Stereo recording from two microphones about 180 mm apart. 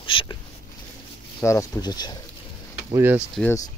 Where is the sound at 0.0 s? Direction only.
25° left (ahead or behind).